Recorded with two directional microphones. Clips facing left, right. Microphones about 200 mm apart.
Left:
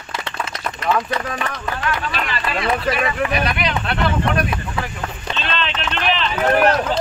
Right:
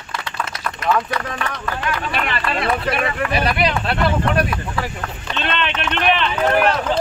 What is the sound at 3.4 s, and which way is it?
Speech, 30° right (ahead or behind).